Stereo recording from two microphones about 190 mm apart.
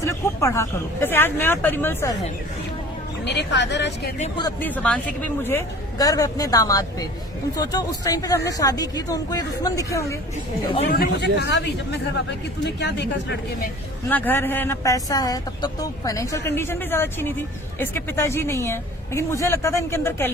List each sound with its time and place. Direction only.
0.0 s speech: 15° left (ahead or behind)
3.2 s speech: 65° left (ahead or behind)
4.6 s a woman's voice: 10° left (ahead or behind)
10.9 s speech: 55° left (ahead or behind)
14.1 s speech: 10° left (ahead or behind)